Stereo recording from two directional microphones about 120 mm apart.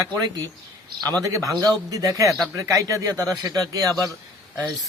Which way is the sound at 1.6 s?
30° right (ahead or behind).